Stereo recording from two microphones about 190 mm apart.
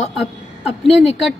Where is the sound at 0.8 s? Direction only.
Centre (ahead or behind).